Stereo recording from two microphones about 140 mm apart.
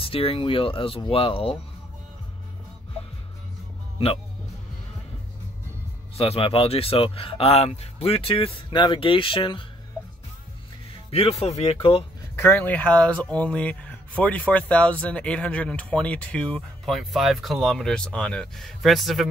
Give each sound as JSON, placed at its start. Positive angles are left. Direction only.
{"t": 0.0, "sound": "speech", "side_deg": 40}
{"t": 6.1, "sound": "speech", "side_deg": 45}
{"t": 11.1, "sound": "speech", "side_deg": 45}
{"t": 12.4, "sound": "speech", "side_deg": 15}